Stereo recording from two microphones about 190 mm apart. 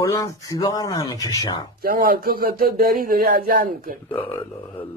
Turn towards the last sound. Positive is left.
turn(degrees=-50)  # may be behind; listen again after turning